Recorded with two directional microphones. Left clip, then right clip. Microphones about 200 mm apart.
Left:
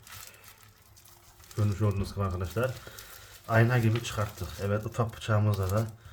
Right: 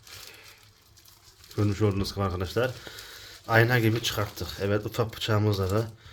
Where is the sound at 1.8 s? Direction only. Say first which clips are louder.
Right 5 dB; 35° right (ahead or behind).